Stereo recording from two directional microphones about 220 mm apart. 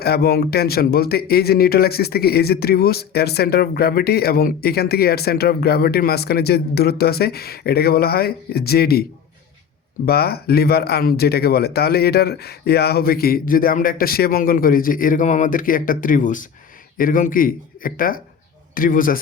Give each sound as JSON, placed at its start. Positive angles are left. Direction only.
{"t": 0.0, "sound": "speech", "side_deg": 45}
{"t": 10.1, "sound": "speech", "side_deg": 45}